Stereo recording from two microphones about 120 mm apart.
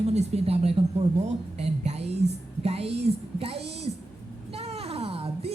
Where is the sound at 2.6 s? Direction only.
55° right (ahead or behind).